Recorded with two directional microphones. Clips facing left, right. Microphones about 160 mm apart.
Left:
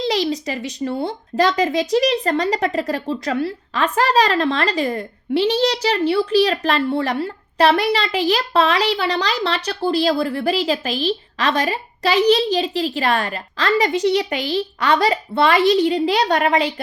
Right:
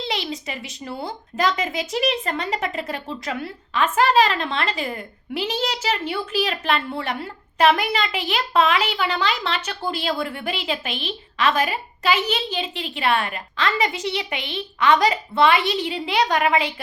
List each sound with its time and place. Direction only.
0.0 s speech: 35° left (ahead or behind)